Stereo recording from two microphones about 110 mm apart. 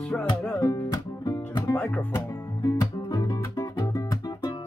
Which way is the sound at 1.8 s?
10° left (ahead or behind).